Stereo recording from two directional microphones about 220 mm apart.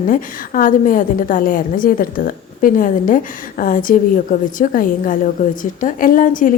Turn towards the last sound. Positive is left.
turn(degrees=35)  # may be behind; listen again after turning